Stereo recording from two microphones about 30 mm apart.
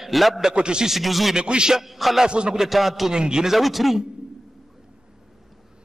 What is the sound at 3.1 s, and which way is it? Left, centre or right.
Speech, right.